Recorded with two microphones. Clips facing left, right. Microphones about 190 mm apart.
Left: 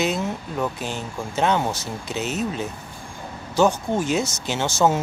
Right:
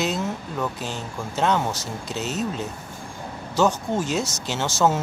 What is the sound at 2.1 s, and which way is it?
Speech, 60° left (ahead or behind).